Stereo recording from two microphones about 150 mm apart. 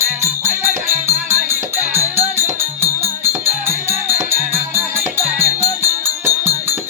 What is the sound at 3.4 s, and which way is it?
Music, 15° right (ahead or behind).